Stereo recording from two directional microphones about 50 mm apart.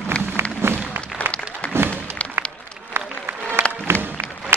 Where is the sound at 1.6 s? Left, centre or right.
Left.